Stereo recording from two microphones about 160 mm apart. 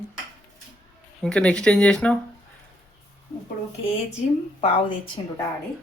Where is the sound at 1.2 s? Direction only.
5° left (ahead or behind).